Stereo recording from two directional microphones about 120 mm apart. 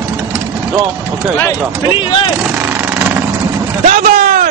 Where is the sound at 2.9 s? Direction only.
20° right (ahead or behind).